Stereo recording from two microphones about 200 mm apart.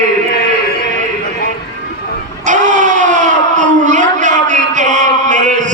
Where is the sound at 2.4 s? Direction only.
40° right (ahead or behind).